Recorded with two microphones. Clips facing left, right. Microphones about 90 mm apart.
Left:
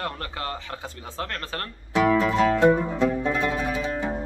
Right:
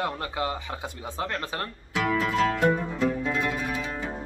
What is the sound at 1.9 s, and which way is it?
Music, 30° left (ahead or behind).